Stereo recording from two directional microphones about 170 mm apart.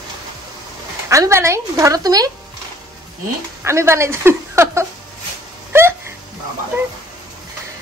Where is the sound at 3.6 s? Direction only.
15° right (ahead or behind).